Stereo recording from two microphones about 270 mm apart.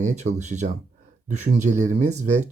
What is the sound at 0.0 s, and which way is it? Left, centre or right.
Speech, right.